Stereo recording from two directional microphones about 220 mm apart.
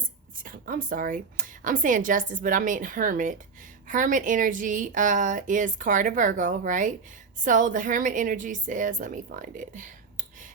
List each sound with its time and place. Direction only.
0.4 s a woman's voice: 40° right (ahead or behind)